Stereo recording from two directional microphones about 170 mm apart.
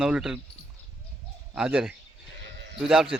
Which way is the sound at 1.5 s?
5° right (ahead or behind).